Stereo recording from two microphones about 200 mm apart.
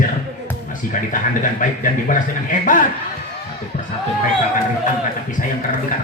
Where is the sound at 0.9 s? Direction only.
40° left (ahead or behind).